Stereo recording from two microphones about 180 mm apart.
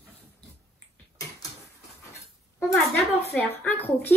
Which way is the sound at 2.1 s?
15° left (ahead or behind).